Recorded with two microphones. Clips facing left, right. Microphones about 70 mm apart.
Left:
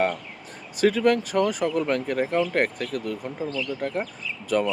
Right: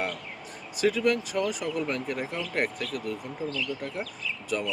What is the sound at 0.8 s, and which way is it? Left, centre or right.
Speech, left.